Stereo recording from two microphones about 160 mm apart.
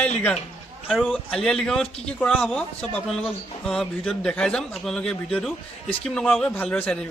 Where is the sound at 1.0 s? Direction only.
5° left (ahead or behind).